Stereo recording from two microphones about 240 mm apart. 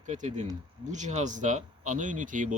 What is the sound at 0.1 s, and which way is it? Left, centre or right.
Speech, right.